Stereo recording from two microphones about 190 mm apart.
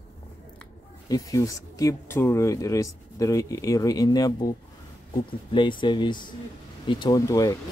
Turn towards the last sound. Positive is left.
turn(degrees=15)  # may be behind; listen again after turning